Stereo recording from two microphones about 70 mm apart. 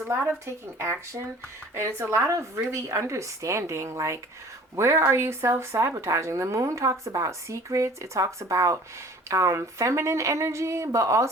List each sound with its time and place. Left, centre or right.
0.3 s speech: right